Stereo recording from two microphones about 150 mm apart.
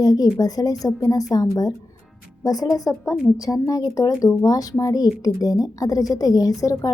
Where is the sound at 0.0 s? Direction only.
25° left (ahead or behind).